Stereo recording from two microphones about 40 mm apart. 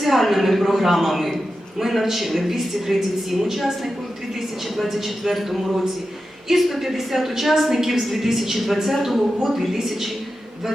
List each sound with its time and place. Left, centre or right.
0.0 s a woman's voice: centre